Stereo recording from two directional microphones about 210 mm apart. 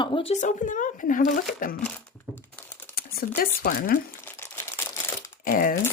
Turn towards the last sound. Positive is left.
turn(degrees=40)  # may be behind; listen again after turning